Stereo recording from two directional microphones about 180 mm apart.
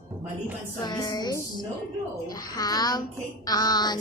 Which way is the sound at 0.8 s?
20° left (ahead or behind).